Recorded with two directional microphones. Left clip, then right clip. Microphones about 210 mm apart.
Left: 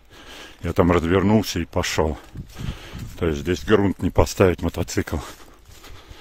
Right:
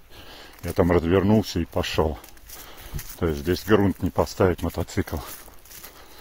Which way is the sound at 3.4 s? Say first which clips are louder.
Left 1 dB; 20° left (ahead or behind).